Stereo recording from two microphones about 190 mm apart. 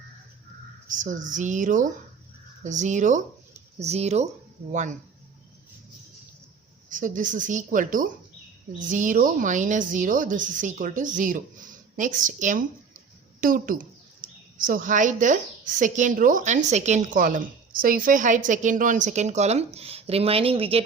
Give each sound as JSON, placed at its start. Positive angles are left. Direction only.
{"t": 0.9, "sound": "a woman's voice", "side_deg": -40}
{"t": 6.9, "sound": "a woman's voice", "side_deg": -45}